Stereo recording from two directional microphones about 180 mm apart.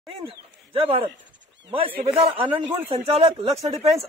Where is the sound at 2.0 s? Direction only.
30° right (ahead or behind).